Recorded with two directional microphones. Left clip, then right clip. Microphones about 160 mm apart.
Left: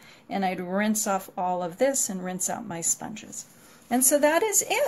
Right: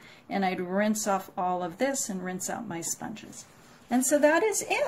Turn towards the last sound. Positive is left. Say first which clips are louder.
# left 2 dB
turn(degrees=25)  # may be behind; listen again after turning